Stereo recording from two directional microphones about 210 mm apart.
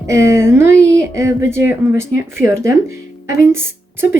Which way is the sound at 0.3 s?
10° right (ahead or behind).